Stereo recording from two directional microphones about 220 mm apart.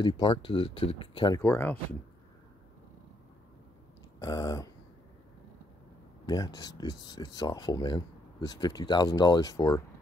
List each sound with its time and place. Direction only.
0.0 s speech: 25° left (ahead or behind); by 2.0 s 10° left (ahead or behind)
4.2 s speech: 15° left (ahead or behind)
6.2 s speech: 15° left (ahead or behind)